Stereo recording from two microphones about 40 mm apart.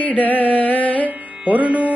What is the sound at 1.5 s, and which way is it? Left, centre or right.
Music, right.